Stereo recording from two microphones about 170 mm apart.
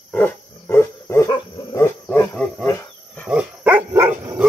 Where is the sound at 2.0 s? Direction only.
15° left (ahead or behind).